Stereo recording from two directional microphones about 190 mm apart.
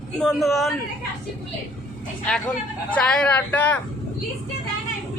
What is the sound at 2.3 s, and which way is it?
A man's voice, 5° left (ahead or behind).